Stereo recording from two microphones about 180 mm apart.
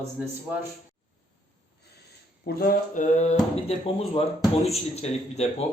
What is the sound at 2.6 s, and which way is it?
Speech, 45° left (ahead or behind).